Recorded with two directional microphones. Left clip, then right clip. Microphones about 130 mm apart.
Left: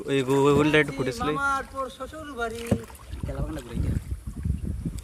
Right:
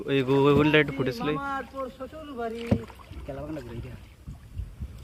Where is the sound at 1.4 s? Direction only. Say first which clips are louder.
Left 5 dB; 5° right (ahead or behind).